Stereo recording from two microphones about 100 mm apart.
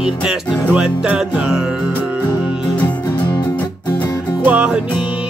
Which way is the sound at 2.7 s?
15° left (ahead or behind).